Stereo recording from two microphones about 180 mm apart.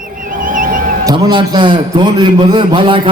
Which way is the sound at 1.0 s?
25° right (ahead or behind).